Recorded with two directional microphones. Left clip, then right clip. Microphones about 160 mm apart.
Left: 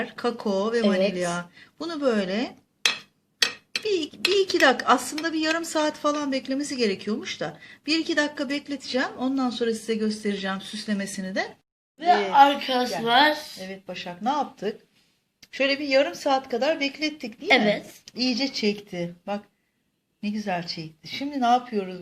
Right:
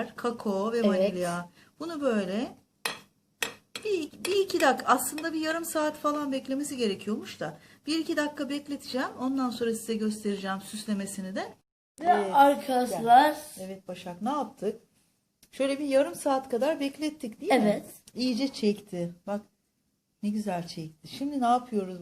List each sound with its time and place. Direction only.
0.0 s speech: 25° left (ahead or behind)
0.8 s speech: 55° left (ahead or behind)
1.3 s speech: 30° left (ahead or behind)
3.8 s speech: 25° left (ahead or behind)
12.1 s speech: 5° right (ahead or behind)
12.4 s a woman's voice: 45° right (ahead or behind)
13.1 s speech: 65° right (ahead or behind)
13.6 s speech: 5° left (ahead or behind)